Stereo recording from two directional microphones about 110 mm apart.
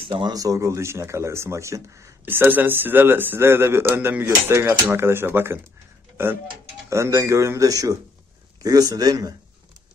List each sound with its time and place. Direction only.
0.0 s speech: 45° right (ahead or behind)
0.4 s speech: 30° right (ahead or behind)
6.9 s a man's voice: 25° right (ahead or behind)